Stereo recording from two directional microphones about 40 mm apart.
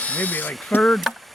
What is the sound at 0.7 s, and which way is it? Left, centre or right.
Speech, left.